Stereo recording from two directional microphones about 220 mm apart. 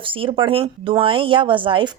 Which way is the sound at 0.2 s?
25° right (ahead or behind).